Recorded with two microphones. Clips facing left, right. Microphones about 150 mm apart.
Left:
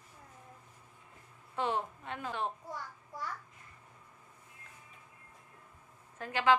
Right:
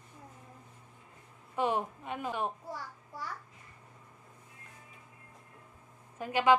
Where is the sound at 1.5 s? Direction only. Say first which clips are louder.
Right 3 dB; 15° right (ahead or behind).